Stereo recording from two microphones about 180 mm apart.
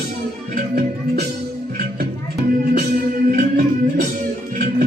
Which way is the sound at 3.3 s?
50° right (ahead or behind).